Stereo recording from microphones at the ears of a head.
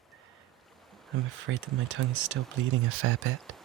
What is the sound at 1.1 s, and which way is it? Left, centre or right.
Speech, right.